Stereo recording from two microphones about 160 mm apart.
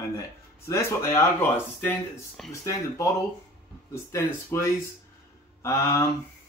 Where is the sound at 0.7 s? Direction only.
15° left (ahead or behind).